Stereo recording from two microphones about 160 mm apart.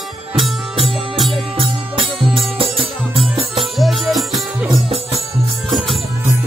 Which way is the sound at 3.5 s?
Centre (ahead or behind).